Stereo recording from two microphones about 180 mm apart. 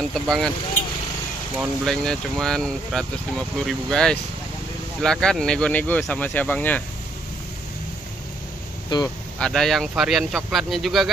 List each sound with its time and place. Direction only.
0.1 s speech: centre (ahead or behind)
1.6 s speech: centre (ahead or behind)
8.9 s speech: 25° left (ahead or behind)
9.4 s speech: centre (ahead or behind)